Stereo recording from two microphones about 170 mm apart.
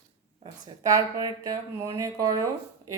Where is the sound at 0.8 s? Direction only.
20° right (ahead or behind).